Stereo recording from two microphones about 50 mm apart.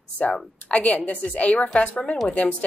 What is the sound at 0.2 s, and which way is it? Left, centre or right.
Speech, left.